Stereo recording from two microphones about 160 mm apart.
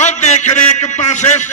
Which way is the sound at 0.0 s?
45° left (ahead or behind).